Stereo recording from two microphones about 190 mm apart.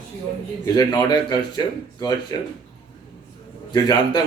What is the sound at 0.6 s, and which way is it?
Speech, 20° left (ahead or behind).